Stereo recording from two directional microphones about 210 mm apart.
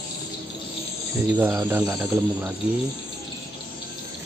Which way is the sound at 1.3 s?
10° right (ahead or behind).